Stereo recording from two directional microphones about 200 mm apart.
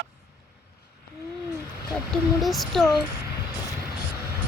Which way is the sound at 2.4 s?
Centre (ahead or behind).